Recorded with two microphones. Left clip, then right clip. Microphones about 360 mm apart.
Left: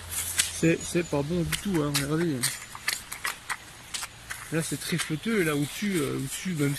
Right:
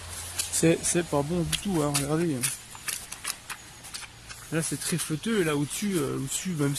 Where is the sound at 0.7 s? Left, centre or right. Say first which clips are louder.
Right 3 dB; centre.